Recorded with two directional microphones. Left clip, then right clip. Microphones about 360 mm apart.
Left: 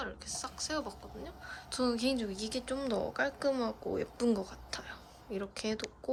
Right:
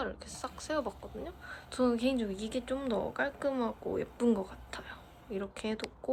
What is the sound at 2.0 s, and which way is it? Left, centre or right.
Speech, left.